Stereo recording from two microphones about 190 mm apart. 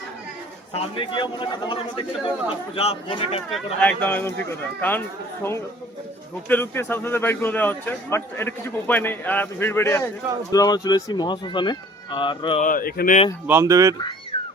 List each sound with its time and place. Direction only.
0.7 s speech: 25° left (ahead or behind)
3.5 s a man's voice: 5° left (ahead or behind); by 12.5 s 25° left (ahead or behind)
12.5 s speech: 45° left (ahead or behind)
13.5 s speech: 15° right (ahead or behind)